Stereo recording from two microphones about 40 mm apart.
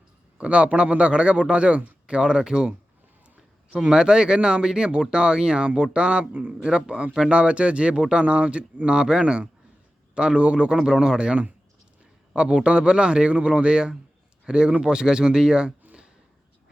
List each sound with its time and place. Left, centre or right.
0.3 s speech: right
6.5 s speech: right